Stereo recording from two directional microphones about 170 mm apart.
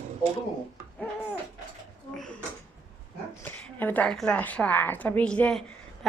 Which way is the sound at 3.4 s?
10° left (ahead or behind).